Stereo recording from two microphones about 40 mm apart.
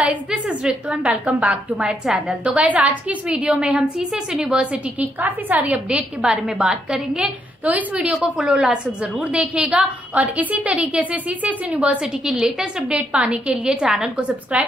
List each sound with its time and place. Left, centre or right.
0.0 s a sound: right
1.1 s a woman's voice: right
3.3 s a woman's voice: right
5.0 s a woman's voice: right
5.9 s a woman's voice: centre
7.6 s a woman's voice: right
8.1 s speech: centre
9.1 s a woman's voice: right
9.8 s a woman's voice: right
12.0 s speech: centre
12.9 s a woman's voice: right